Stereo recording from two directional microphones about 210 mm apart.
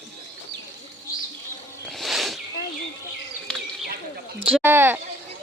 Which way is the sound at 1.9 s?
Centre (ahead or behind).